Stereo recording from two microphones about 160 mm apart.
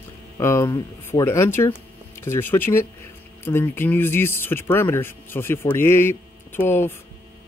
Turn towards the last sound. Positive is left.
turn(degrees=15)  # may be behind; listen again after turning